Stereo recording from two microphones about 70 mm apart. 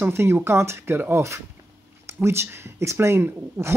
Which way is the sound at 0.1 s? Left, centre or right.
Right.